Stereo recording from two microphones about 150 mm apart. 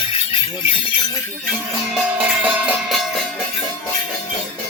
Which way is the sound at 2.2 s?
10° right (ahead or behind).